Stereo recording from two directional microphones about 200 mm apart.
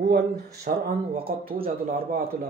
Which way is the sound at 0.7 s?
45° right (ahead or behind).